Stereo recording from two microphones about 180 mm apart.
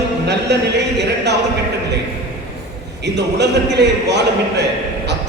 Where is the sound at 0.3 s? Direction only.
70° right (ahead or behind).